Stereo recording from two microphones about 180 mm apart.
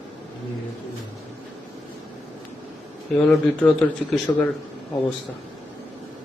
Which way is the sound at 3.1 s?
5° left (ahead or behind).